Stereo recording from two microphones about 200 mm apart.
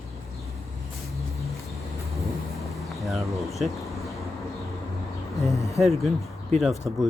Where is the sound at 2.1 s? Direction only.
Centre (ahead or behind).